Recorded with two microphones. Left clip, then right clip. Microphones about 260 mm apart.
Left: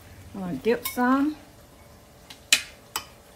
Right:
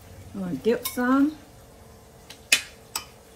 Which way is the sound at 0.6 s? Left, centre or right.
Left.